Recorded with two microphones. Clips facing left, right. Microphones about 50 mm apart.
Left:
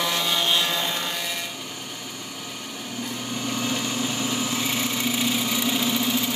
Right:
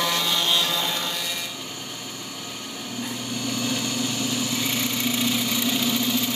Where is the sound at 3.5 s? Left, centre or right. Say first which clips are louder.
Even; centre.